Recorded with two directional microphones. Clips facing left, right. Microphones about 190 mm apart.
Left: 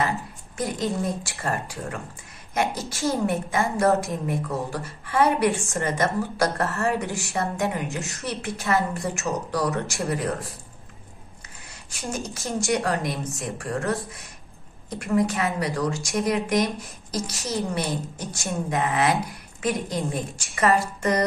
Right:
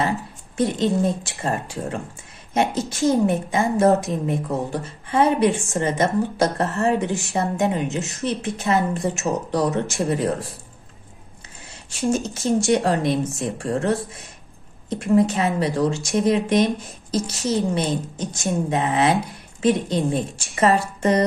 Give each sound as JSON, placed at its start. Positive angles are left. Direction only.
{"t": 0.6, "sound": "a woman's voice", "side_deg": -25}
{"t": 12.4, "sound": "a woman's voice", "side_deg": -25}
{"t": 17.1, "sound": "a woman's voice", "side_deg": 0}
{"t": 17.6, "sound": "a woman's voice", "side_deg": -20}